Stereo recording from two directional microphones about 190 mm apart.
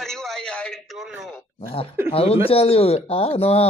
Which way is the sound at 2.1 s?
30° left (ahead or behind).